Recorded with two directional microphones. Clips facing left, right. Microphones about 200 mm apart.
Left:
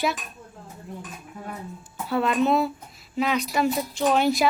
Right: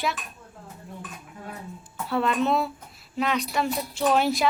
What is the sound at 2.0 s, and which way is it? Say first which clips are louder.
A woman's voice: left 2 dB; centre (ahead or behind).